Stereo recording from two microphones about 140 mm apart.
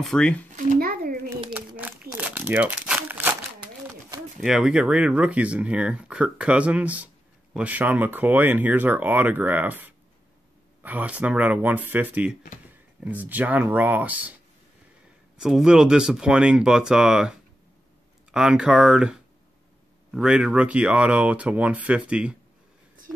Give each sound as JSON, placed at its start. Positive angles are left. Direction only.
{"t": 0.0, "sound": "speech", "side_deg": 5}
{"t": 0.5, "sound": "a sound", "side_deg": -85}
{"t": 1.8, "sound": "crumpling", "side_deg": -10}
{"t": 4.5, "sound": "speech", "side_deg": -5}
{"t": 15.3, "sound": "speech", "side_deg": -5}
{"t": 23.1, "sound": "a sound", "side_deg": -5}